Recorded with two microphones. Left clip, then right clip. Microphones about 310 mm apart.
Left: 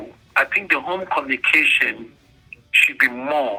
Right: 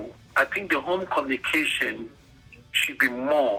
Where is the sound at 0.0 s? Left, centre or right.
Left.